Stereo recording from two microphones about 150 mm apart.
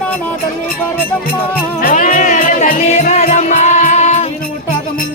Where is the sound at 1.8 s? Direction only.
65° left (ahead or behind).